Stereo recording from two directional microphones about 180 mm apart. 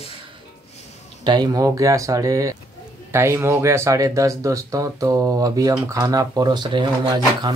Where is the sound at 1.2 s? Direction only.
25° right (ahead or behind).